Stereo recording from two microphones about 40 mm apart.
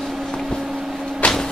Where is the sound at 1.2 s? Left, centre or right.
Left.